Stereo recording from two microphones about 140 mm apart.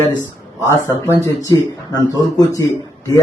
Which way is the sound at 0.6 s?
20° left (ahead or behind).